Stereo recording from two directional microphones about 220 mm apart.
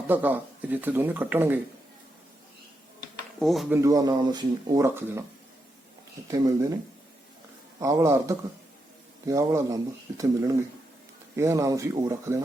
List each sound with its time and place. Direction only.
0.1 s speech: 10° right (ahead or behind)
3.4 s speech: centre (ahead or behind)
3.8 s speech: 15° right (ahead or behind)
6.3 s speech: 15° right (ahead or behind)
7.8 s speech: 15° right (ahead or behind)